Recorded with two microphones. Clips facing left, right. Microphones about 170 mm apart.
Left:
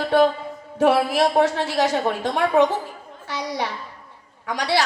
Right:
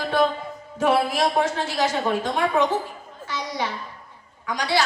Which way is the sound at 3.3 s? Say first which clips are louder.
Left 2 dB; 65° left (ahead or behind).